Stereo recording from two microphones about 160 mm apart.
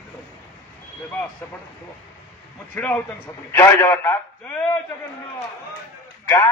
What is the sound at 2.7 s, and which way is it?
A man's voice, 10° left (ahead or behind).